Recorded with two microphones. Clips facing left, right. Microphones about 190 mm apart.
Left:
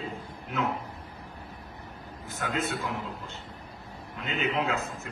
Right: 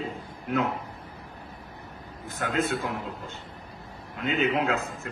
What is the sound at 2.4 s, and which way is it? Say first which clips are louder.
Speech: right 4 dB; 55° right (ahead or behind).